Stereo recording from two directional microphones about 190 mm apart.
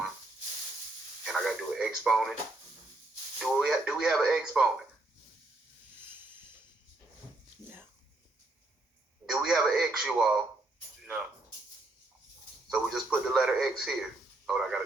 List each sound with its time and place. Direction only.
1.2 s radio: centre (ahead or behind)
3.3 s speech: centre (ahead or behind)
6.1 s a sound: 10° right (ahead or behind)
7.6 s a sound: 20° left (ahead or behind)
9.3 s speech: centre (ahead or behind)
12.6 s speech: 5° right (ahead or behind)